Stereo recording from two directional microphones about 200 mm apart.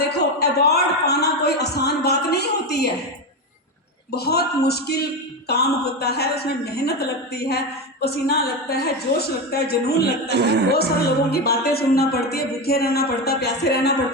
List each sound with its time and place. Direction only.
0.2 s a sound: 55° left (ahead or behind)
4.1 s speech: 55° left (ahead or behind)
10.2 s a woman's voice: 55° right (ahead or behind)
11.3 s speech: 50° left (ahead or behind)